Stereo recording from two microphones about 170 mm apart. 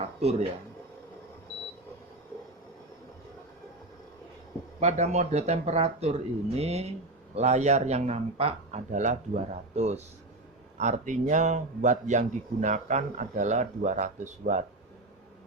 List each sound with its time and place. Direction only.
0.2 s speech: 40° right (ahead or behind)
4.8 s a man's voice: 40° right (ahead or behind)